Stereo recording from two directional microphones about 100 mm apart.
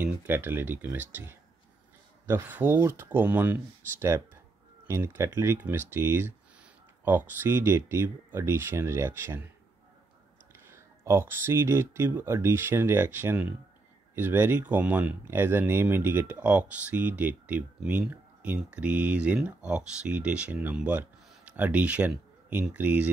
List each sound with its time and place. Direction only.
0.0 s speech: 20° right (ahead or behind)
4.8 s speech: 25° right (ahead or behind)
10.5 s speech: 25° right (ahead or behind)